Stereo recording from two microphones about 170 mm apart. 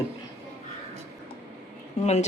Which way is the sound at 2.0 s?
40° left (ahead or behind).